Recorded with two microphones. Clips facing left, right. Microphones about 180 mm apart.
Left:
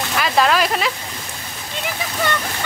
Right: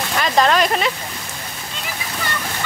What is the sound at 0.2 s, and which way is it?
Speech, 5° left (ahead or behind).